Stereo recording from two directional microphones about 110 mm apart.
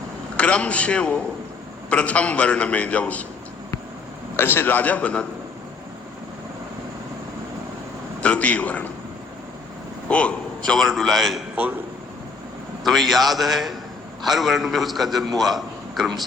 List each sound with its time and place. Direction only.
0.3 s a man's voice: 10° left (ahead or behind)
4.4 s a man's voice: 20° left (ahead or behind)
8.2 s a man's voice: 10° left (ahead or behind)
10.1 s a man's voice: 10° left (ahead or behind)
12.8 s a man's voice: centre (ahead or behind)